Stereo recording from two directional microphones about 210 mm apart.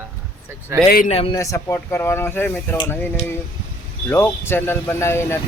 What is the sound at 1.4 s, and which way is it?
Speech, 15° left (ahead or behind).